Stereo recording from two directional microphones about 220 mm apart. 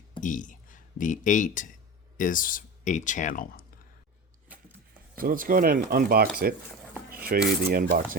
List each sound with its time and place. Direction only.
0.2 s speech: 35° left (ahead or behind)
4.4 s a sound: 5° right (ahead or behind)
5.1 s speech: 40° right (ahead or behind)
7.3 s cutlery: 40° right (ahead or behind)